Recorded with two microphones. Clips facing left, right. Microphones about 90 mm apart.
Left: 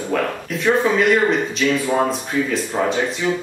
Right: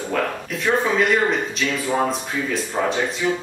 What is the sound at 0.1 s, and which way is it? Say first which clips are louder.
Speech: left 2 dB; centre (ahead or behind).